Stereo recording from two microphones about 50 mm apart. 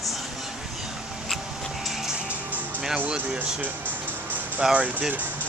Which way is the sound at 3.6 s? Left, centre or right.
Right.